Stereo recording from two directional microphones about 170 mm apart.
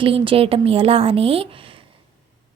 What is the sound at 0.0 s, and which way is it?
A woman's voice, 30° right (ahead or behind).